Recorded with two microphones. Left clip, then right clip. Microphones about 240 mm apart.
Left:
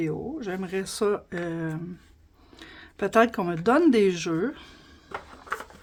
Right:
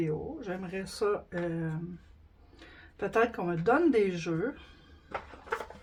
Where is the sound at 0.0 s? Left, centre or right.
Left.